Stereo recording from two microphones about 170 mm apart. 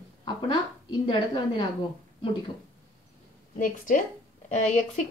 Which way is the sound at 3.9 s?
50° left (ahead or behind).